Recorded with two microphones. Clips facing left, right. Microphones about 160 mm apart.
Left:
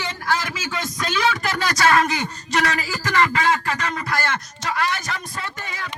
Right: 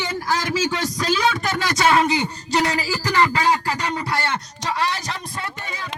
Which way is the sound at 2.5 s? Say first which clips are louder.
Right 2 dB; 30° right (ahead or behind).